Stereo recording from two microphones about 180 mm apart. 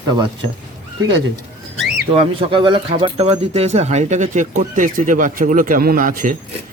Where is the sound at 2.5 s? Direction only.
30° right (ahead or behind); by 6.3 s 50° right (ahead or behind).